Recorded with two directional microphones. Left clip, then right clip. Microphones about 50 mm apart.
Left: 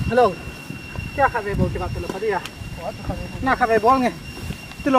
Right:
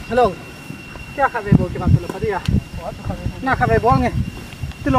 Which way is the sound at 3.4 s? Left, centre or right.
Left.